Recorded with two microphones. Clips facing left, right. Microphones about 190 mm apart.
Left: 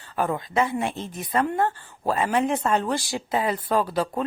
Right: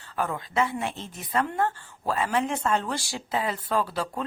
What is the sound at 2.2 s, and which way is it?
A woman's voice, 20° left (ahead or behind).